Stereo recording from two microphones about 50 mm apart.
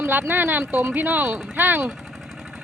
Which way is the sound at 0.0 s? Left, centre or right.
Right.